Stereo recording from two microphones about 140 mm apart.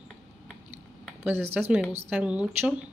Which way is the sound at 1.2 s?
15° right (ahead or behind).